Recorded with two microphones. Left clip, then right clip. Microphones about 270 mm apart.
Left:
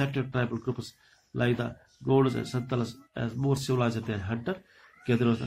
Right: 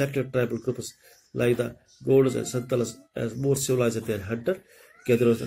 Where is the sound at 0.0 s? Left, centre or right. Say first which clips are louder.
Right 5 dB; centre.